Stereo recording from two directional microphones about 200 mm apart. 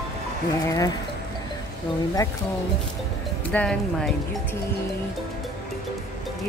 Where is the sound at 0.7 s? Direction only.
15° left (ahead or behind).